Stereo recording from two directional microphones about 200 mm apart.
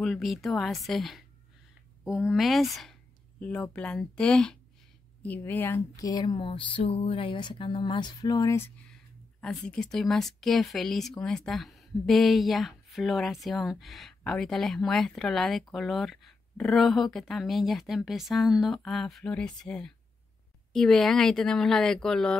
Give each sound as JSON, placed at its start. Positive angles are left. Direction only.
{"t": 0.0, "sound": "speech", "side_deg": 0}
{"t": 8.9, "sound": "speech", "side_deg": 5}